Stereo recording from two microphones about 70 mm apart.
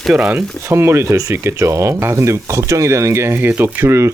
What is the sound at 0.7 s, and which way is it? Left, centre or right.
Speech, right.